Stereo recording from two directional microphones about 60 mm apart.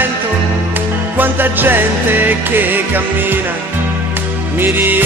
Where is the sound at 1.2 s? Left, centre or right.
Right.